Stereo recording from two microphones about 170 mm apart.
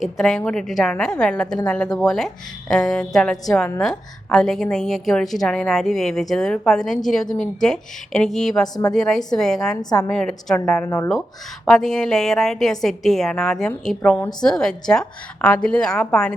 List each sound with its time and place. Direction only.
0.0 s a woman's voice: centre (ahead or behind)
8.6 s a woman's voice: 25° left (ahead or behind)
8.9 s a woman's voice: centre (ahead or behind)
10.8 s speech: 15° left (ahead or behind)
11.6 s a woman's voice: centre (ahead or behind)